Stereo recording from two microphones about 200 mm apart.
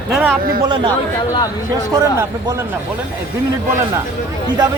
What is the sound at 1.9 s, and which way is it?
Speech, 15° right (ahead or behind).